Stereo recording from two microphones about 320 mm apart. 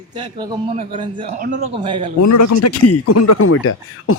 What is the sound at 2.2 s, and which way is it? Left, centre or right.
Speech, left.